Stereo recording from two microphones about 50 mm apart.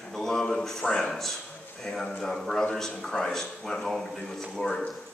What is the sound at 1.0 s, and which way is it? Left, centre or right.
A man's voice, centre.